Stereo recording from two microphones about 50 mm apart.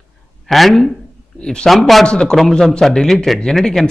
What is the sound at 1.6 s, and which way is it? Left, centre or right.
Speech, centre.